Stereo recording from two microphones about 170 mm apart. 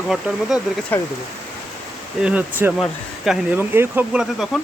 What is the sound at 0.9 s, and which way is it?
Speech, 10° left (ahead or behind).